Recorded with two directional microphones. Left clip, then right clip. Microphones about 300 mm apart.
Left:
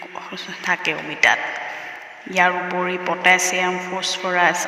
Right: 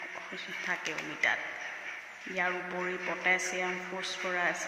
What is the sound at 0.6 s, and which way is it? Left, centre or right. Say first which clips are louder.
A man's voice: left 14 dB; left.